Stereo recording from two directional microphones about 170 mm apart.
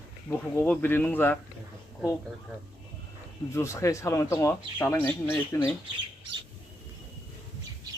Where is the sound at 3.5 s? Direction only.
15° left (ahead or behind).